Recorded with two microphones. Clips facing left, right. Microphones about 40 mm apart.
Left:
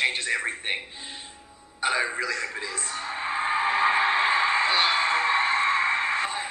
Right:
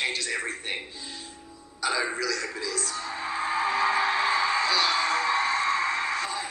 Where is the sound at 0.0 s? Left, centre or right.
Left.